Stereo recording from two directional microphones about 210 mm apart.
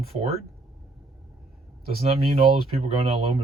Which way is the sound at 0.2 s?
30° right (ahead or behind).